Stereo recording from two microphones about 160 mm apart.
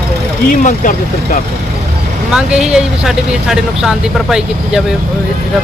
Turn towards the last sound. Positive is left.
turn(degrees=-5)  # may be behind; listen again after turning